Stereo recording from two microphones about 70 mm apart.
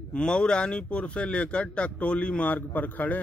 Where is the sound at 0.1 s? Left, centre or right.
Centre.